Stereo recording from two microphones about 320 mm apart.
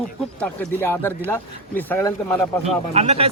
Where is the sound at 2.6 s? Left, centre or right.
Centre.